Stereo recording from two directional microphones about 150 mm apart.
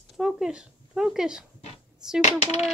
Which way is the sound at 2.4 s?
45° left (ahead or behind).